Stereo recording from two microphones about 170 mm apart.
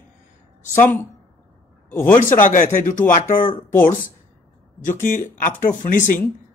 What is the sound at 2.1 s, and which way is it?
Speech, 50° left (ahead or behind).